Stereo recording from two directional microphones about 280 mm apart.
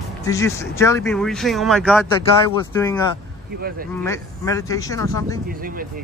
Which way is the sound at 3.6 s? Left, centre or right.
Right.